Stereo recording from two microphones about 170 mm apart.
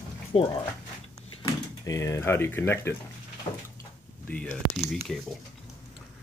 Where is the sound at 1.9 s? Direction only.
15° left (ahead or behind).